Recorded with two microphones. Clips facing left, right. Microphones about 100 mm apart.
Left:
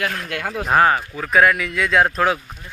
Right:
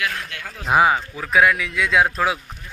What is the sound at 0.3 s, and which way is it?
Speech, 55° left (ahead or behind).